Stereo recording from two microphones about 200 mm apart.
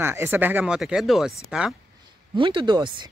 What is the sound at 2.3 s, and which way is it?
Speech, 25° right (ahead or behind).